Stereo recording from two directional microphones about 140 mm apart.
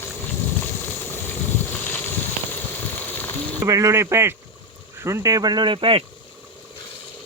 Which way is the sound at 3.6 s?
25° right (ahead or behind).